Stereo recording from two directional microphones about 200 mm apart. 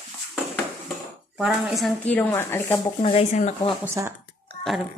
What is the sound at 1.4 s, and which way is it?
Speech, centre (ahead or behind).